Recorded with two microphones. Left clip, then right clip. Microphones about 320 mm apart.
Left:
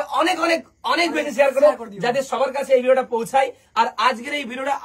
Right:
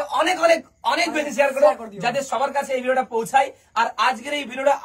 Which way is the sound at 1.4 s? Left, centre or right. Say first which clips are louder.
Left 2 dB; centre.